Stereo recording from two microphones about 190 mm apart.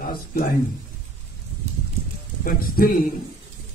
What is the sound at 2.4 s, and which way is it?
Speech, 50° left (ahead or behind).